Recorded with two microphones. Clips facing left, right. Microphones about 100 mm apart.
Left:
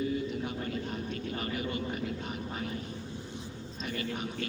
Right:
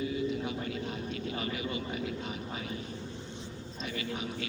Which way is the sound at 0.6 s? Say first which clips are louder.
Left 1 dB; 45° left (ahead or behind).